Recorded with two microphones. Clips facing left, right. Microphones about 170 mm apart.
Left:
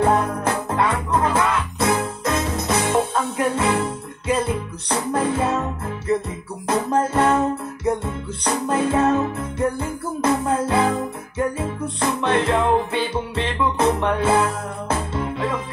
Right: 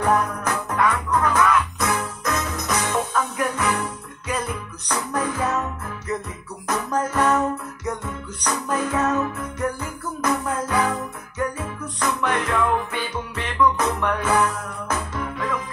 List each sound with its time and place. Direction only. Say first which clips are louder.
0.0 s music: left 3 dB; 25° left (ahead or behind)